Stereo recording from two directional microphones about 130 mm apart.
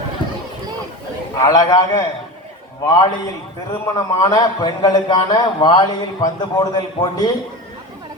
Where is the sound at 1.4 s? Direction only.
25° left (ahead or behind).